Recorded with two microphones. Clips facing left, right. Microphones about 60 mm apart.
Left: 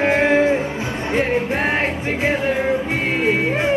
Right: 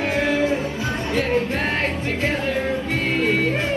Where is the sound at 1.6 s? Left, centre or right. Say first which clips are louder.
Left 3 dB; centre.